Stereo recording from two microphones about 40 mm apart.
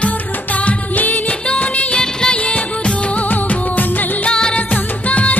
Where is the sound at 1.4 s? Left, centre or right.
Left.